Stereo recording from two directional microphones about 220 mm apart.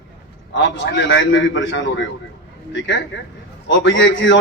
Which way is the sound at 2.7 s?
55° left (ahead or behind).